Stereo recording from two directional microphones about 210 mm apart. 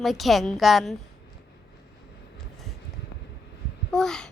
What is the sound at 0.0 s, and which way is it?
Speech, centre (ahead or behind).